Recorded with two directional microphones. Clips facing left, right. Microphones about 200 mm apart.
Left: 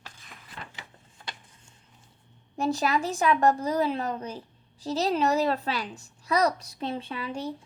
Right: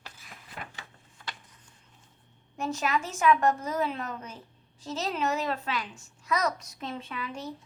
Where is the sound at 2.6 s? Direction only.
35° left (ahead or behind).